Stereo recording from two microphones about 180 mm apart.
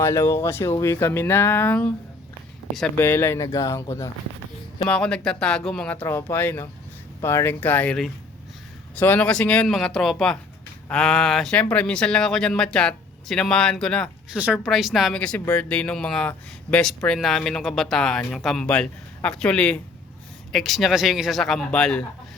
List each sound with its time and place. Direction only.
0.0 s speech: 15° left (ahead or behind)
3.1 s speech: 15° left (ahead or behind)
4.8 s speech: 5° left (ahead or behind)
14.3 s speech: 5° right (ahead or behind)